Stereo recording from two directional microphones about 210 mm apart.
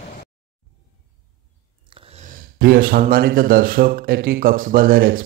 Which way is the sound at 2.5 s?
45° right (ahead or behind).